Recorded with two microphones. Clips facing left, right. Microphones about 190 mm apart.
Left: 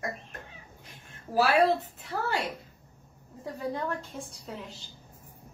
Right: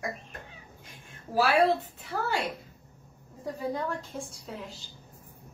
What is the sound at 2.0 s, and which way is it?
A woman's voice, centre (ahead or behind).